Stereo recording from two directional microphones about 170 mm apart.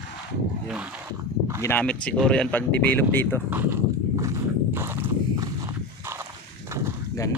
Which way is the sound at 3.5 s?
10° right (ahead or behind).